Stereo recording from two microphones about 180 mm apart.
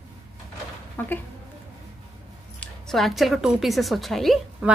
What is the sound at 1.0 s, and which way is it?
Speech, 10° left (ahead or behind).